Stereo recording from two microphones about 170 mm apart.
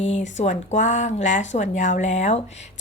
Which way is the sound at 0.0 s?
45° left (ahead or behind).